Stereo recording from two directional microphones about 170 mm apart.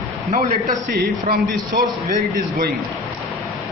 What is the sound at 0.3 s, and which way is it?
Speech, 45° right (ahead or behind).